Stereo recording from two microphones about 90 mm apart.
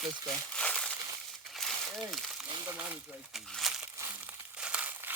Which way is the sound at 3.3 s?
Centre (ahead or behind).